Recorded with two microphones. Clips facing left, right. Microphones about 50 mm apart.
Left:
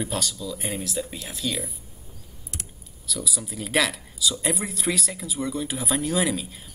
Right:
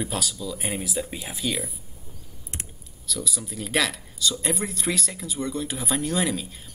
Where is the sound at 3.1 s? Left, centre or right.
Centre.